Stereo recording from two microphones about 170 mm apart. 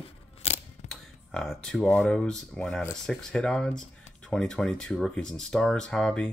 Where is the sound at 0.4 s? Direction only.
40° left (ahead or behind).